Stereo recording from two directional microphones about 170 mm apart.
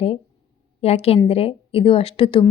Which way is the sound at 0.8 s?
35° left (ahead or behind).